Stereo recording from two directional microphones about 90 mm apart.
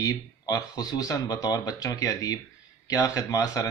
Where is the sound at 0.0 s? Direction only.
45° left (ahead or behind).